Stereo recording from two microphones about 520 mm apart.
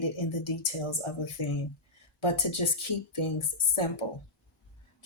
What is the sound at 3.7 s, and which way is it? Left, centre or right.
Speech, left.